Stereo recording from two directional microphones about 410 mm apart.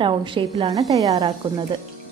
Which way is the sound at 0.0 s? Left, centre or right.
Centre.